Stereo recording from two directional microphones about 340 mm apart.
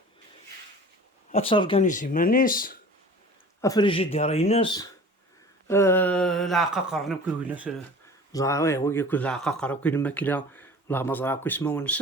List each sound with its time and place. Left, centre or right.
1.3 s speech: centre
3.6 s speech: centre
8.3 s speech: centre